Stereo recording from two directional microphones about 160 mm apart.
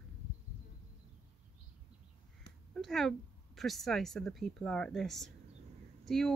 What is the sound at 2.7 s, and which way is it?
Speech, centre (ahead or behind).